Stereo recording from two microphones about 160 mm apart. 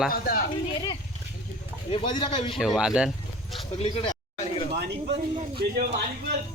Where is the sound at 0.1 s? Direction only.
65° left (ahead or behind).